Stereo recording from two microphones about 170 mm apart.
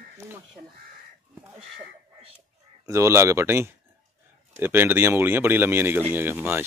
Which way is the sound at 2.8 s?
15° right (ahead or behind).